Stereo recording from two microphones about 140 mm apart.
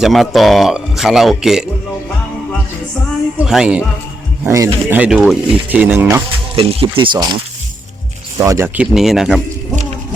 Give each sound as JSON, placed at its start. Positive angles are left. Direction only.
{"t": 0.0, "sound": "a man's voice", "side_deg": 0}
{"t": 3.4, "sound": "speech", "side_deg": -5}
{"t": 4.4, "sound": "speech", "side_deg": -20}
{"t": 6.6, "sound": "speech", "side_deg": -40}
{"t": 8.4, "sound": "speech", "side_deg": -20}